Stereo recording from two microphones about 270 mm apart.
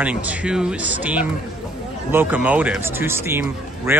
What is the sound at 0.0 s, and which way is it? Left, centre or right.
Speech, centre.